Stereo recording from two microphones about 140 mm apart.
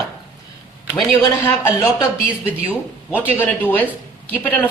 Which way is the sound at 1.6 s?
20° left (ahead or behind).